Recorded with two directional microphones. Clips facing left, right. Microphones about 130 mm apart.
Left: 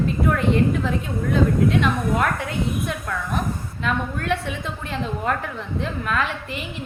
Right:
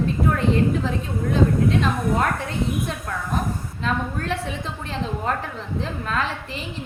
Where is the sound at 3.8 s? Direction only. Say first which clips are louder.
Left 1 dB; 35° right (ahead or behind).